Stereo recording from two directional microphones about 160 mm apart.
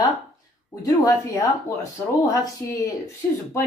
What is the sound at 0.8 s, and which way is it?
Speech, 20° left (ahead or behind).